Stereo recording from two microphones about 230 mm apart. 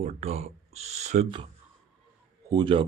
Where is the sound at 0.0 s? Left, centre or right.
Right.